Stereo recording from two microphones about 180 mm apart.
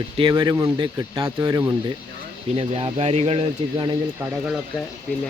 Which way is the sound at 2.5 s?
35° right (ahead or behind).